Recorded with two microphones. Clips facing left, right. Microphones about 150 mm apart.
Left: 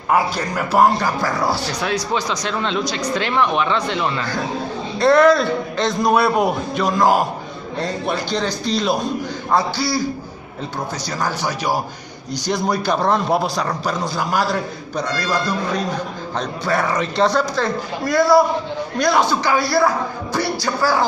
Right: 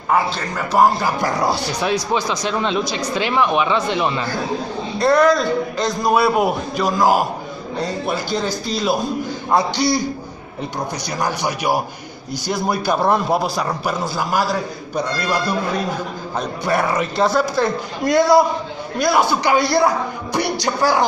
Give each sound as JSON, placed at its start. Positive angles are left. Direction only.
{"t": 0.1, "sound": "a man's voice", "side_deg": 5}
{"t": 1.2, "sound": "a man's voice", "side_deg": -20}
{"t": 4.9, "sound": "a man's voice", "side_deg": 0}
{"t": 9.6, "sound": "speech", "side_deg": -20}
{"t": 11.1, "sound": "a man's voice", "side_deg": -15}
{"t": 18.0, "sound": "speech", "side_deg": -20}
{"t": 18.9, "sound": "a man's voice", "side_deg": -5}